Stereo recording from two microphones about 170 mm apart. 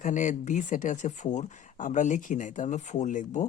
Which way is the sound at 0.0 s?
50° left (ahead or behind).